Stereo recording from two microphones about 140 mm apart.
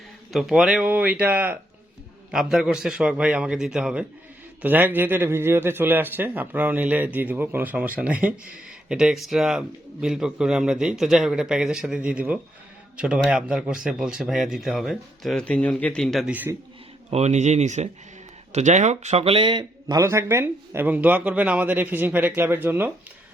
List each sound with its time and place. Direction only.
0.3 s a man's voice: 5° right (ahead or behind)
16.3 s a man's voice: 10° right (ahead or behind)
17.1 s speech: 50° right (ahead or behind); by 20.0 s 35° right (ahead or behind)
20.0 s a man's voice: 20° right (ahead or behind)